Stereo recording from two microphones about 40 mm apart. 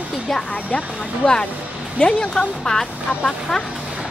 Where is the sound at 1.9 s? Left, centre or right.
Left.